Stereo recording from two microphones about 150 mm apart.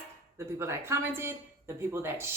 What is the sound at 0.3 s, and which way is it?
Speech, 15° right (ahead or behind).